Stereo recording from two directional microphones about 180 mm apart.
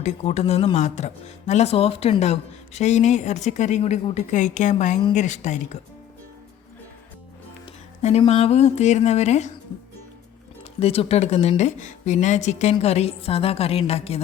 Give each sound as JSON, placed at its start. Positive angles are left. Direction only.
{"t": 0.0, "sound": "speech", "side_deg": 35}
{"t": 7.6, "sound": "music", "side_deg": 35}
{"t": 8.2, "sound": "speech", "side_deg": 35}
{"t": 10.6, "sound": "speech", "side_deg": 35}